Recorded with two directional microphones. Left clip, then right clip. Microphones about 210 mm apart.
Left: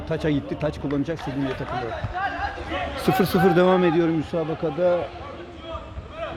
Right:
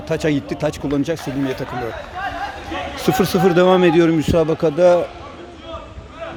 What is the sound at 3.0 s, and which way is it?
Speech, 10° right (ahead or behind).